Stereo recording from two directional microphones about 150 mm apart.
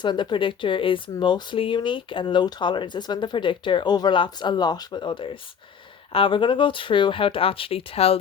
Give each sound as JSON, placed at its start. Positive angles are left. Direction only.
{"t": 0.0, "sound": "speech", "side_deg": 30}